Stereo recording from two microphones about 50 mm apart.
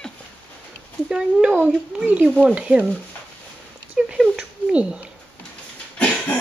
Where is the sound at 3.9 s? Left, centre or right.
Centre.